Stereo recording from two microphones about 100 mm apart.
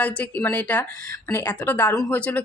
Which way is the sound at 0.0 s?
15° left (ahead or behind).